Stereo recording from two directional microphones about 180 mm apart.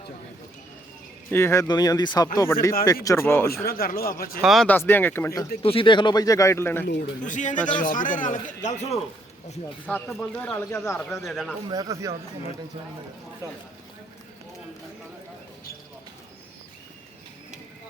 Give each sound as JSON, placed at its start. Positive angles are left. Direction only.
{"t": 1.3, "sound": "speech", "side_deg": 15}
{"t": 3.7, "sound": "speech", "side_deg": 55}
{"t": 4.4, "sound": "speech", "side_deg": 0}
{"t": 5.6, "sound": "speech", "side_deg": 30}
{"t": 7.2, "sound": "speech", "side_deg": 45}
{"t": 9.8, "sound": "speech", "side_deg": 5}
{"t": 11.2, "sound": "speech", "side_deg": 0}
{"t": 11.7, "sound": "speech", "side_deg": -20}